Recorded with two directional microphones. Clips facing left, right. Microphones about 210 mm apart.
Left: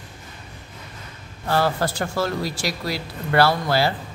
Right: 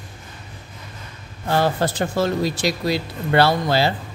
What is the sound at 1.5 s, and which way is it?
Speech, 20° right (ahead or behind).